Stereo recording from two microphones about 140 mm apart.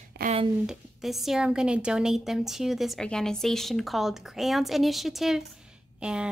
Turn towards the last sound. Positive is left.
turn(degrees=-5)  # may be behind; listen again after turning